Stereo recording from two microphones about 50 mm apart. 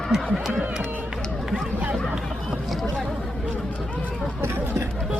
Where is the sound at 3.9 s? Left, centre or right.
Left.